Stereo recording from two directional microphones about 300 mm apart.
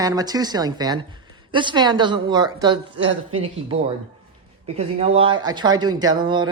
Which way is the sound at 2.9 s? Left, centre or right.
Right.